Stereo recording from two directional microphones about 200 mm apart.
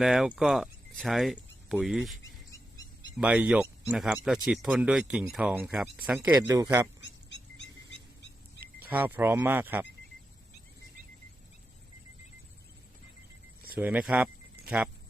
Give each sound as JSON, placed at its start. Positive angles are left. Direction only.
{"t": 0.0, "sound": "speech", "side_deg": -5}
{"t": 3.2, "sound": "speech", "side_deg": -5}
{"t": 7.0, "sound": "a sound", "side_deg": 60}
{"t": 8.6, "sound": "speech", "side_deg": -10}
{"t": 13.7, "sound": "speech", "side_deg": -5}
{"t": 14.6, "sound": "a sound", "side_deg": -5}